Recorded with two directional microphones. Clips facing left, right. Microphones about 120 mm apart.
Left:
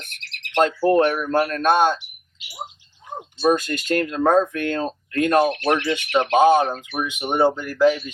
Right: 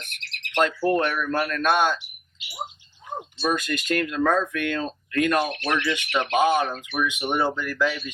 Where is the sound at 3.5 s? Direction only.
30° left (ahead or behind).